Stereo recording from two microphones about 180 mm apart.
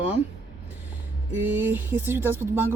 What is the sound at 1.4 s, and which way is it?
A woman's voice, 10° right (ahead or behind).